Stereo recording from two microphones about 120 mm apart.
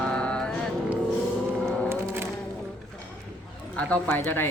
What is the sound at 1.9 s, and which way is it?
Music, 20° right (ahead or behind).